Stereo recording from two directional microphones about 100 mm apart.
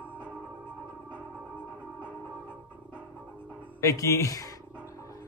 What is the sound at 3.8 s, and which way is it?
Speech, 30° left (ahead or behind).